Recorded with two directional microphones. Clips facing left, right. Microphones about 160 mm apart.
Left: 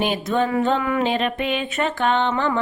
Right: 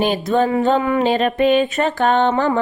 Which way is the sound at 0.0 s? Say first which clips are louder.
Right 4 dB; 35° right (ahead or behind).